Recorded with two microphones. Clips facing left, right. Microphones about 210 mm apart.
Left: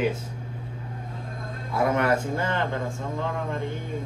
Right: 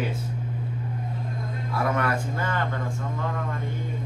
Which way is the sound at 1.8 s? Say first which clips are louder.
Left 4 dB; 25° left (ahead or behind).